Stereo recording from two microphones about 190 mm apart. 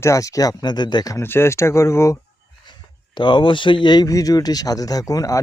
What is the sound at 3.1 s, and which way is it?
A man's voice, 25° left (ahead or behind).